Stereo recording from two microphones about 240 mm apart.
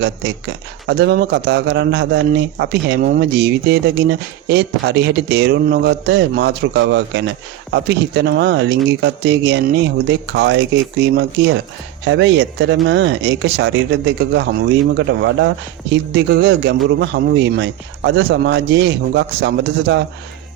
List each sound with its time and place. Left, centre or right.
0.9 s speech: right